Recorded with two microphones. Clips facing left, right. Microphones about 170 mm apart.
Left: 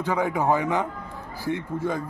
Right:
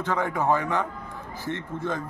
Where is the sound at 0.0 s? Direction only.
15° left (ahead or behind).